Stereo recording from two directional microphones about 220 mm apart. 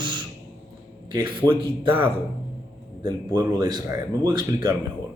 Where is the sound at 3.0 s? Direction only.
20° right (ahead or behind).